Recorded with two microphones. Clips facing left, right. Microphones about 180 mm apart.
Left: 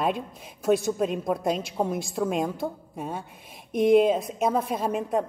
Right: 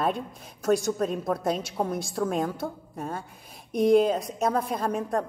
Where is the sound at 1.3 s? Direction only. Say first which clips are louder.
Left 1 dB; 10° left (ahead or behind).